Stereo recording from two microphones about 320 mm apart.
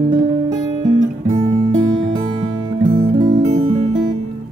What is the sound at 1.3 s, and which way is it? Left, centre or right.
Guitar, centre.